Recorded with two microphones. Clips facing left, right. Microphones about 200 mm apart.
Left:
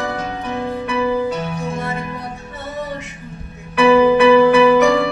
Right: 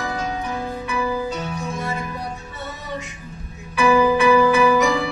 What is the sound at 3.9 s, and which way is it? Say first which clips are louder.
Music: left 5 dB; 30° left (ahead or behind).